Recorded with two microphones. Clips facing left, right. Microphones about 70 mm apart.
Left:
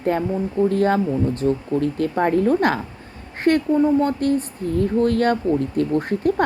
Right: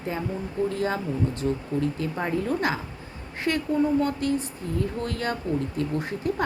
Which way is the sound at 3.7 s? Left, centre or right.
Left.